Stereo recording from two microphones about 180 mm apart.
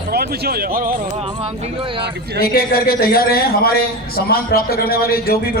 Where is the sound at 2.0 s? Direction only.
65° right (ahead or behind).